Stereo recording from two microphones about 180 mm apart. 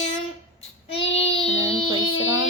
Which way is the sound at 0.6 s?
35° left (ahead or behind).